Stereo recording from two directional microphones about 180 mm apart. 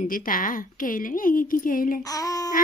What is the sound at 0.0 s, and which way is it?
Speech, 50° left (ahead or behind).